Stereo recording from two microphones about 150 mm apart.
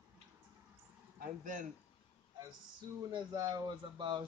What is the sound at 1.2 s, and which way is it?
Speech, 65° right (ahead or behind).